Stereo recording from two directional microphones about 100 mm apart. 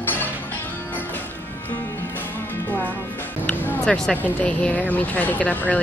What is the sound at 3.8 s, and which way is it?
Speech, 5° left (ahead or behind).